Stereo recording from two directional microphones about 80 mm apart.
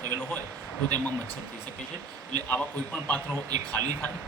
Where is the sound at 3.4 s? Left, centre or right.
Right.